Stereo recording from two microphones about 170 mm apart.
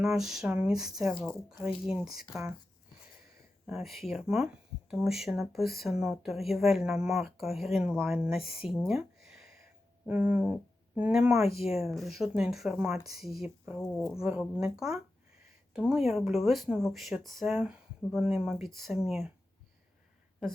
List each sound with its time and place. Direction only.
0.0 s speech: centre (ahead or behind)
3.7 s speech: centre (ahead or behind)
8.9 s a sound: 5° right (ahead or behind)
10.1 s speech: 10° right (ahead or behind)
11.4 s speech: 35° left (ahead or behind)
11.7 s speech: centre (ahead or behind)
13.7 s speech: 15° left (ahead or behind)
14.2 s speech: 5° right (ahead or behind)